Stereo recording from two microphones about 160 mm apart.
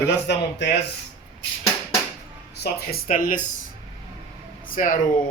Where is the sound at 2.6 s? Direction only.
75° left (ahead or behind); by 3.4 s 60° left (ahead or behind).